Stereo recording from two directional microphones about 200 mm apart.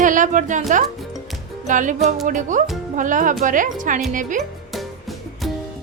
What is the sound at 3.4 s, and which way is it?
Music, 40° right (ahead or behind).